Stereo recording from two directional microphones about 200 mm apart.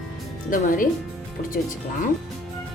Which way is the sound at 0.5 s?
45° left (ahead or behind).